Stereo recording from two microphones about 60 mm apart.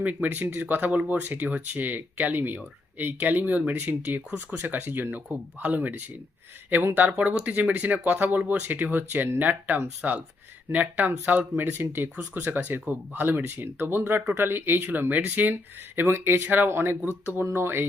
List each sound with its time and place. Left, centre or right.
0.0 s speech: right
7.1 s speech: centre
10.0 s speech: centre; by 17.8 s right